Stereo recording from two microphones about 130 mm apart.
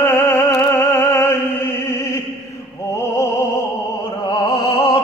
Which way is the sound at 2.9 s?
25° left (ahead or behind).